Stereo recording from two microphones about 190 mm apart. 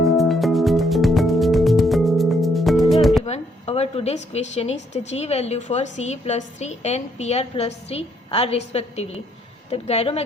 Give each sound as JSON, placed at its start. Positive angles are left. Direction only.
{"t": 0.0, "sound": "music", "side_deg": 0}
{"t": 3.2, "sound": "a woman's voice", "side_deg": 35}